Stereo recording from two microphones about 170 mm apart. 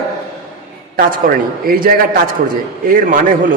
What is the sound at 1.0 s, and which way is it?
A man's voice, 55° right (ahead or behind).